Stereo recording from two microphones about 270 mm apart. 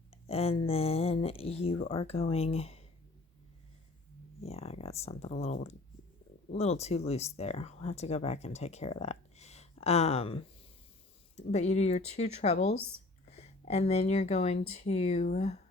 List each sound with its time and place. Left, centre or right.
0.1 s speech: left
4.4 s speech: left